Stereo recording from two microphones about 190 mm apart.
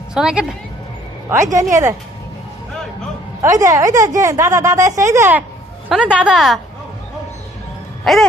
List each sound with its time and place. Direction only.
0.1 s speech: 5° right (ahead or behind)
1.3 s a woman's voice: 15° right (ahead or behind)
3.4 s a woman's voice: 15° right (ahead or behind)
5.9 s speech: 5° right (ahead or behind)
8.1 s speech: centre (ahead or behind)